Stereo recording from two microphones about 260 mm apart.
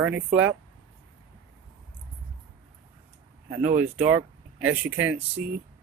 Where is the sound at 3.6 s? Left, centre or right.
Right.